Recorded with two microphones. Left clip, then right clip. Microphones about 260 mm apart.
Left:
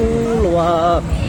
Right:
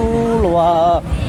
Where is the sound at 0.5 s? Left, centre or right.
Right.